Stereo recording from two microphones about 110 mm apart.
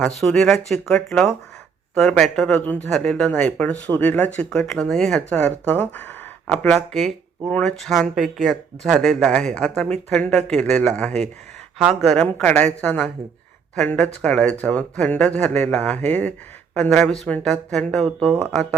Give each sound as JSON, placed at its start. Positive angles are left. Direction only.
{"t": 0.0, "sound": "speech", "side_deg": 5}
{"t": 6.7, "sound": "speech", "side_deg": 0}
{"t": 11.8, "sound": "speech", "side_deg": -5}